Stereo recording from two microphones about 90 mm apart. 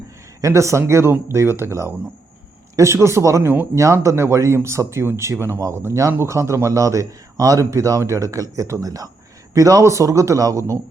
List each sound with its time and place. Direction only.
0.4 s speech: 35° right (ahead or behind)